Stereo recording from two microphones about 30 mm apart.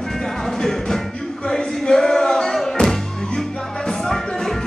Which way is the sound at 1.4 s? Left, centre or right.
Left.